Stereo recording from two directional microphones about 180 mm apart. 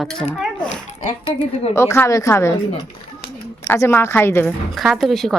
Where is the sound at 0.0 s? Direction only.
5° left (ahead or behind).